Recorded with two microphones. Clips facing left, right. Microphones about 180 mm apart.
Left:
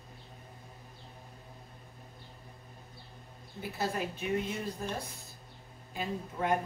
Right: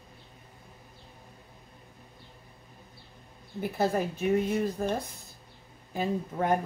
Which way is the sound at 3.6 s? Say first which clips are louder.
Right 7 dB; 50° right (ahead or behind).